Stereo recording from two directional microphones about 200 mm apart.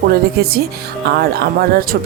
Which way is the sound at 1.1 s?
50° right (ahead or behind).